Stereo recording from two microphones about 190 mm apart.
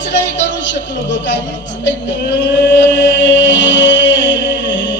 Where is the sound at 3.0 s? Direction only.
70° left (ahead or behind).